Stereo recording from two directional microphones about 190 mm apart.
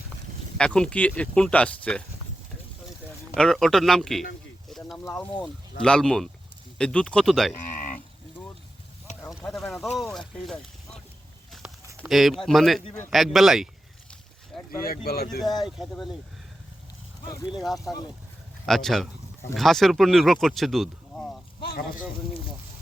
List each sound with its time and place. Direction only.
0.5 s speech: 5° left (ahead or behind)
3.3 s speech: 5° left (ahead or behind)
4.7 s a sound: centre (ahead or behind)
5.8 s speech: 5° left (ahead or behind)
7.6 s a sound: 40° left (ahead or behind)
9.3 s speech: centre (ahead or behind)
12.0 s speech: centre (ahead or behind)
14.5 s boat: centre (ahead or behind)
14.8 s speech: 55° left (ahead or behind)
15.5 s speech: centre (ahead or behind)
17.5 s speech: centre (ahead or behind)